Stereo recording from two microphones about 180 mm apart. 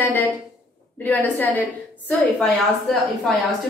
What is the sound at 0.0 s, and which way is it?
A woman's voice, 10° left (ahead or behind).